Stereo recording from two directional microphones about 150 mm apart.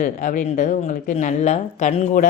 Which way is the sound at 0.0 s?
60° left (ahead or behind).